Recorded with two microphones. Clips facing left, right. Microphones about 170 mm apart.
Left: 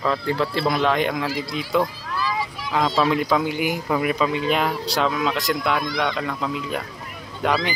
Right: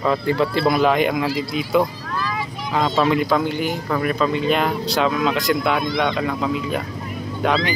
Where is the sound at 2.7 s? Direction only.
Centre (ahead or behind).